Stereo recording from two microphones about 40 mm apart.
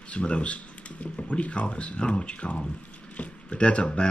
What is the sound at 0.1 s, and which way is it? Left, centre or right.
Speech, left.